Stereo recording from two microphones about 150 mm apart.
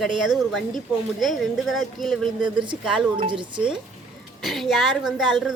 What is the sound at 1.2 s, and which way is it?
A woman's voice, centre (ahead or behind).